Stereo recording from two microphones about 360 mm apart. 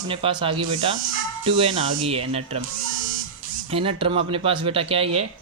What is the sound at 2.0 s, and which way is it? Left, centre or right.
Speech, centre.